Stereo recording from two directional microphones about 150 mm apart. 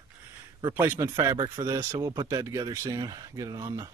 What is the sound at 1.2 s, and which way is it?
Speech, 25° right (ahead or behind).